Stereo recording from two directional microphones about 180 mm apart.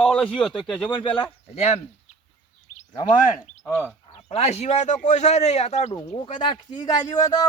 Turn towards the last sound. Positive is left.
turn(degrees=20)  # may be behind; listen again after turning